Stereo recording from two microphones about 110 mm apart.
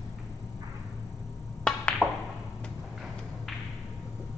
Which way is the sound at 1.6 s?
5° left (ahead or behind).